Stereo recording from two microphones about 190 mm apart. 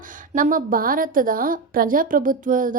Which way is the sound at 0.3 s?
45° right (ahead or behind).